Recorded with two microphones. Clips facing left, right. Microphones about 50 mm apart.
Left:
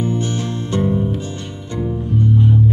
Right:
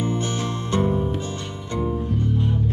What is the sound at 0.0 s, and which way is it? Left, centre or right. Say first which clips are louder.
Music: left 4 dB; right.